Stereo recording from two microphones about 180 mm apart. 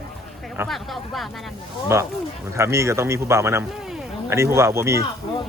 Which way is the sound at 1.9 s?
15° right (ahead or behind).